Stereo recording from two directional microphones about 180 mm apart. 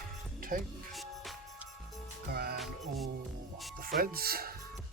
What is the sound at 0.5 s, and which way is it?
Speech, 55° right (ahead or behind).